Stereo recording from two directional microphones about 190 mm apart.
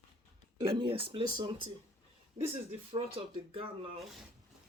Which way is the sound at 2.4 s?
45° right (ahead or behind).